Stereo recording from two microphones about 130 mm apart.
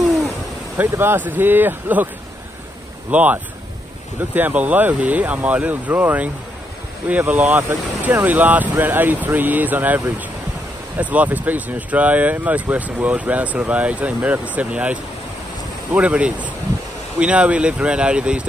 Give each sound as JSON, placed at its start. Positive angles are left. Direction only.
{"t": 0.7, "sound": "speech", "side_deg": -15}
{"t": 3.1, "sound": "speech", "side_deg": -10}